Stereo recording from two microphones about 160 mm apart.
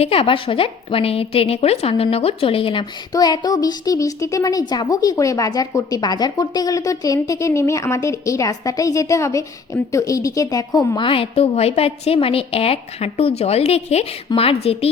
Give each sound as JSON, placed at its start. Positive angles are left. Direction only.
{"t": 0.0, "sound": "a woman's voice", "side_deg": 35}